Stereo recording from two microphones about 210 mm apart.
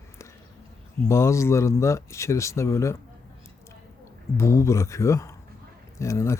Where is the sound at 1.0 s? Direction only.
15° left (ahead or behind).